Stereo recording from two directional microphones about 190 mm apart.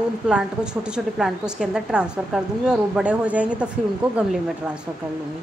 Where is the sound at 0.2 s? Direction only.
5° right (ahead or behind).